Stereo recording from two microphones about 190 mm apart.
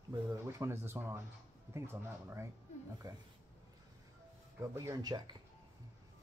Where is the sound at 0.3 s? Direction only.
15° right (ahead or behind).